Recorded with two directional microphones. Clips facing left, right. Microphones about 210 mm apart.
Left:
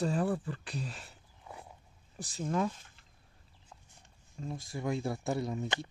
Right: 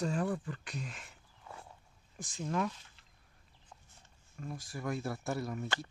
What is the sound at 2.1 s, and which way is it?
Speech, 35° left (ahead or behind).